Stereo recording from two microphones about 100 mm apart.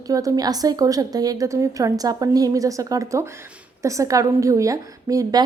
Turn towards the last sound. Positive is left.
turn(degrees=-40)  # may be behind; listen again after turning